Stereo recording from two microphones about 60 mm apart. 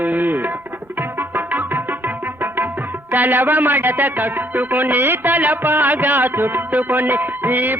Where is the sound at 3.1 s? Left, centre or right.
Right.